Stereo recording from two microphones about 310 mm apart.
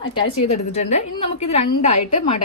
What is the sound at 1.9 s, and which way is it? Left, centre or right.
Speech, left.